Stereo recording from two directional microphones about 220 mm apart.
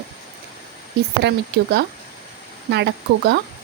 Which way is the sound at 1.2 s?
50° right (ahead or behind).